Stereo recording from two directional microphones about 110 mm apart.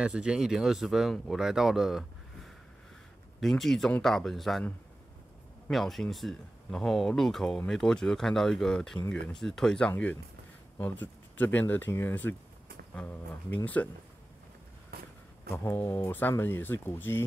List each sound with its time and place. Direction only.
0.0 s speech: 10° right (ahead or behind); by 10.1 s 10° left (ahead or behind)
11.3 s speech: 15° left (ahead or behind)
15.5 s speech: 20° left (ahead or behind)